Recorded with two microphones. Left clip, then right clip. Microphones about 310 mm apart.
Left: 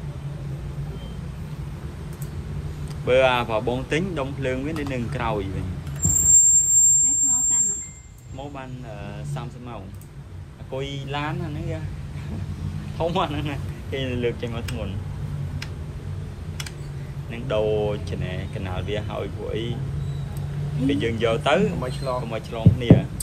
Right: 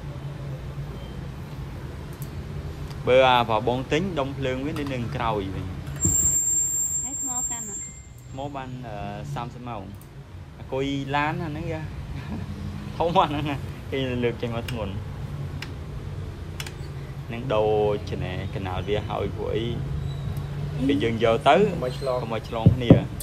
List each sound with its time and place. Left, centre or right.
2.9 s speech: centre
8.4 s speech: centre
12.9 s speech: centre
17.3 s speech: centre
20.8 s speech: centre